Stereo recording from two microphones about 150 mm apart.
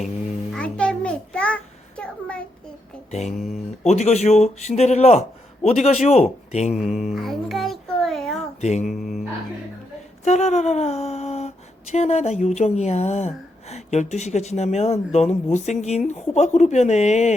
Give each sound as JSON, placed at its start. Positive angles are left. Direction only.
{"t": 0.5, "sound": "a sound", "side_deg": 5}
{"t": 3.1, "sound": "speech", "side_deg": 50}
{"t": 3.3, "sound": "speech", "side_deg": 0}
{"t": 3.8, "sound": "speech", "side_deg": 50}
{"t": 6.7, "sound": "a sound", "side_deg": -5}
{"t": 8.6, "sound": "speech", "side_deg": 50}
{"t": 9.0, "sound": "music", "side_deg": 0}
{"t": 10.2, "sound": "speech", "side_deg": 50}